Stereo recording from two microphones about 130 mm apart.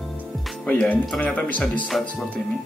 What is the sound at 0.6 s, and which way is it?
Speech, 10° left (ahead or behind).